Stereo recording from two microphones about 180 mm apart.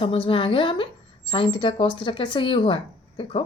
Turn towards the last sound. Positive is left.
turn(degrees=30)  # may be behind; listen again after turning